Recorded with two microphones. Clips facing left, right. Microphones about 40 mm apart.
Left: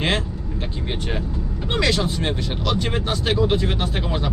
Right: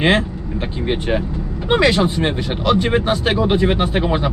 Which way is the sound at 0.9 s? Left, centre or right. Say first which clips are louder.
Right 9 dB; right.